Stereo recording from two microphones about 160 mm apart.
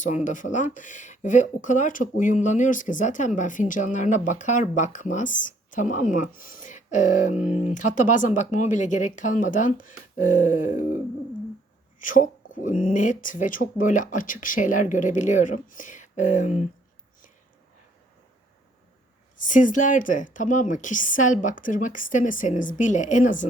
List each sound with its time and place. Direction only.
0.3 s speech: 50° left (ahead or behind)
7.3 s speech: 10° right (ahead or behind)
7.7 s speech: 50° left (ahead or behind)
11.9 s speech: 55° left (ahead or behind)
19.4 s speech: 55° left (ahead or behind)